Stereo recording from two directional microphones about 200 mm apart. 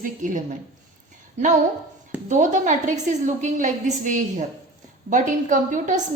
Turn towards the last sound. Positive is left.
turn(degrees=-40)  # may be behind; listen again after turning